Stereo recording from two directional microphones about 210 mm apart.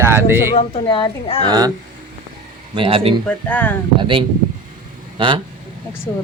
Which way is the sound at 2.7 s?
25° right (ahead or behind).